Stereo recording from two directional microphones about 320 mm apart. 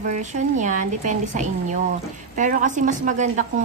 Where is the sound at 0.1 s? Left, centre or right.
Right.